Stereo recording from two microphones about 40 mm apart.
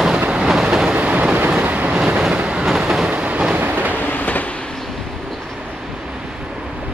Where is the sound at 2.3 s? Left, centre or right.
Right.